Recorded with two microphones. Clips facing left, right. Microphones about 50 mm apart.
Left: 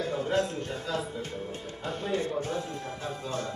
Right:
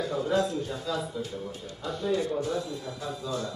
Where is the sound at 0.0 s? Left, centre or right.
Left.